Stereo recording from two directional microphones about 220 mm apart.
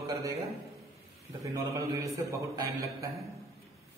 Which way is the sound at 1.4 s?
15° right (ahead or behind).